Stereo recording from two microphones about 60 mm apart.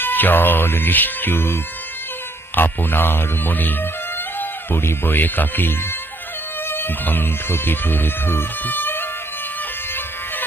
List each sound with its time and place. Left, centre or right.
0.0 s speech: left
2.6 s speech: left